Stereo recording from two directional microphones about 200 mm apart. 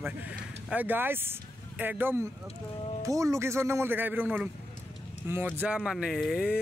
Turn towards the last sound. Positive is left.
turn(degrees=-5)  # may be behind; listen again after turning